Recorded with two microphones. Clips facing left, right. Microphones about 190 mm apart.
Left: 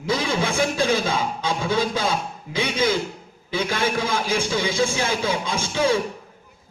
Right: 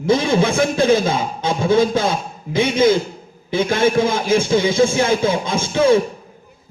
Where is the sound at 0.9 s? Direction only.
45° right (ahead or behind).